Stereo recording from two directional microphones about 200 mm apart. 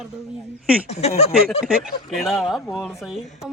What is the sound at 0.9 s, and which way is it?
Speech, 30° left (ahead or behind).